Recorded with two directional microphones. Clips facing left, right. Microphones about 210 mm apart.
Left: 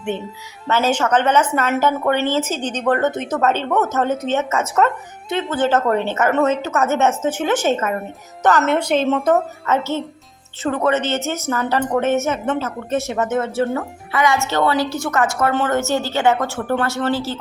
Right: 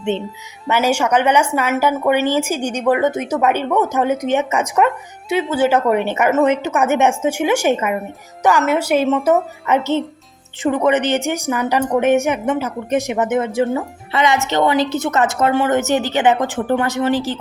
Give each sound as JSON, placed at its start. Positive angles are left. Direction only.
{"t": 0.7, "sound": "speech", "side_deg": -10}